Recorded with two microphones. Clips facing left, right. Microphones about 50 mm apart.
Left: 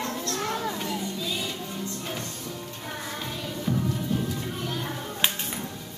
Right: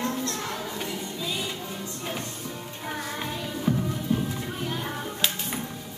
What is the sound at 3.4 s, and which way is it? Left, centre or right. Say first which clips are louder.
Music: right 1 dB; centre.